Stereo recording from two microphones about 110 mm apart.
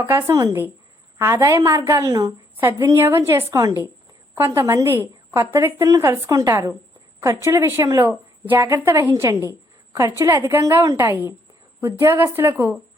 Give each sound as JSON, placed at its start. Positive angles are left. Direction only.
{"t": 0.0, "sound": "speech", "side_deg": -20}